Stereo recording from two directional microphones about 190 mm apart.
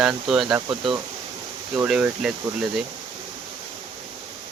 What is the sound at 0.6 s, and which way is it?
Speech, 25° right (ahead or behind).